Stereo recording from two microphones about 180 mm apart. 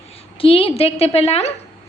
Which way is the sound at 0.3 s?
30° left (ahead or behind).